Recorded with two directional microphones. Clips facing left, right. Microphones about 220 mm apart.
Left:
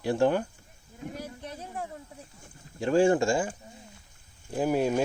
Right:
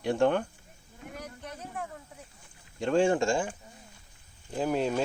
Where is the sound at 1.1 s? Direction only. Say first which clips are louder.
Left 1 dB; 30° left (ahead or behind).